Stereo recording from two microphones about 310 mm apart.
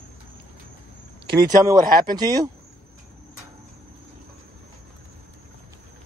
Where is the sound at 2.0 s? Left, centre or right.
Centre.